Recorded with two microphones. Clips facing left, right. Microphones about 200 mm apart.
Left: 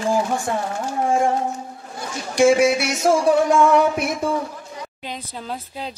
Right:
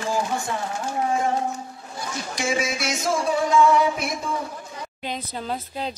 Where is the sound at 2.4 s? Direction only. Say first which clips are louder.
Left 12 dB; 65° left (ahead or behind).